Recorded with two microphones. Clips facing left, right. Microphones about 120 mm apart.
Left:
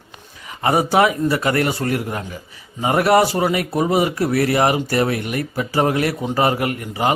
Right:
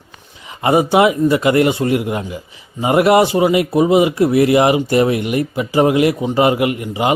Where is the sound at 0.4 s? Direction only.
15° right (ahead or behind).